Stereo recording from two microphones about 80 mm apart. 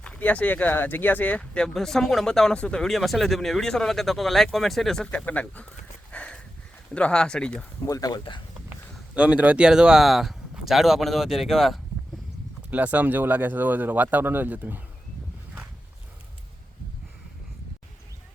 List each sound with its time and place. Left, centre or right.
0.0 s speech: centre
5.1 s speech: centre
6.1 s a sound: centre
6.9 s speech: centre
7.9 s speech: left
9.1 s speech: centre
12.7 s speech: centre